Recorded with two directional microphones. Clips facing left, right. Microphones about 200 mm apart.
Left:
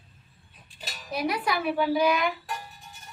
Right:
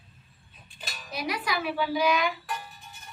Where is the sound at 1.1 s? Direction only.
55° left (ahead or behind).